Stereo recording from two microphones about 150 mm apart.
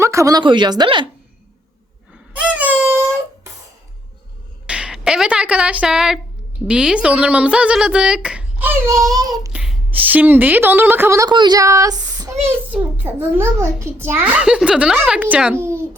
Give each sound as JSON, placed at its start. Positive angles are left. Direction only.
{"t": 0.0, "sound": "speech", "side_deg": -20}
{"t": 2.3, "sound": "a sound", "side_deg": -10}
{"t": 4.6, "sound": "a sound", "side_deg": -5}
{"t": 6.7, "sound": "a child's voice", "side_deg": -5}
{"t": 8.9, "sound": "speech", "side_deg": -25}
{"t": 9.5, "sound": "a woman's voice", "side_deg": -5}
{"t": 12.5, "sound": "a child's voice", "side_deg": -15}